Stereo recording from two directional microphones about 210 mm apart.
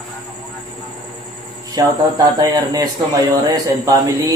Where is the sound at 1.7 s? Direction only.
20° right (ahead or behind).